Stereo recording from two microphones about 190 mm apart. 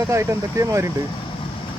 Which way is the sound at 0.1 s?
15° right (ahead or behind).